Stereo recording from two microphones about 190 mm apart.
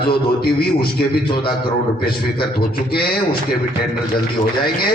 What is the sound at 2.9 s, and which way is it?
Speech, 55° left (ahead or behind).